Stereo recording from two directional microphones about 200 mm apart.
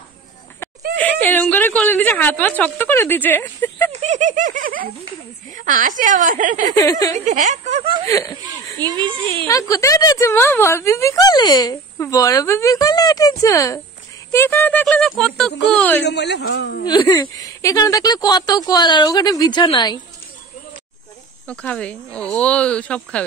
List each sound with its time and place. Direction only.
0.9 s a woman's voice: 10° left (ahead or behind)
4.0 s laughter: 35° right (ahead or behind)
5.5 s a woman's voice: 40° right (ahead or behind)
6.8 s a woman's voice: 15° left (ahead or behind)
7.2 s a woman's voice: 35° right (ahead or behind)
8.1 s speech: 15° left (ahead or behind)
8.8 s a child's voice: 25° right (ahead or behind)
9.5 s a woman's voice: 15° left (ahead or behind)
16.0 s a man's voice: 55° left (ahead or behind)
16.8 s speech: 20° left (ahead or behind)
21.5 s speech: 5° left (ahead or behind)